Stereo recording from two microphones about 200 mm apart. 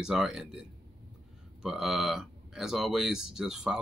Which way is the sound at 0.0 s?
Centre (ahead or behind).